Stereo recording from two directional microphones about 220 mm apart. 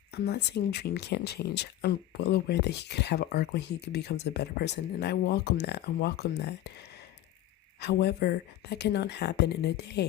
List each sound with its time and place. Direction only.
0.1 s speech: 50° left (ahead or behind)